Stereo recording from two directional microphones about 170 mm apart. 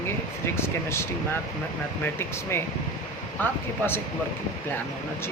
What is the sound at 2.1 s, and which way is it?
Speech, 15° left (ahead or behind).